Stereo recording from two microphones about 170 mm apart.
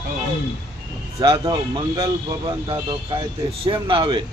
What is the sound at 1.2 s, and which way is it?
Speech, 25° right (ahead or behind).